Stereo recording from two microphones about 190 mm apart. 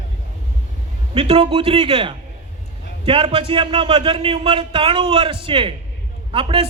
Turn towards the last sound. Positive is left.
turn(degrees=-30)  # may be behind; listen again after turning